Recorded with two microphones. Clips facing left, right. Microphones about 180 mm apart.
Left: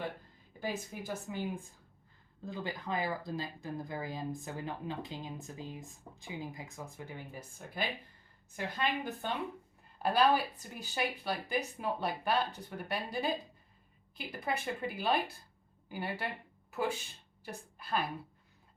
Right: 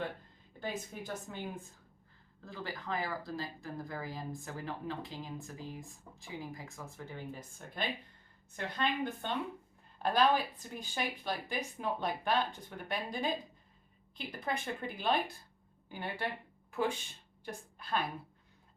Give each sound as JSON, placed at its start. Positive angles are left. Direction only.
{"t": 0.6, "sound": "speech", "side_deg": 10}
{"t": 2.4, "sound": "a woman's voice", "side_deg": 15}
{"t": 17.4, "sound": "a woman's voice", "side_deg": 5}